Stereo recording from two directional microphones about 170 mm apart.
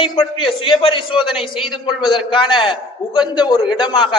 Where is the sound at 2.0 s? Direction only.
30° left (ahead or behind).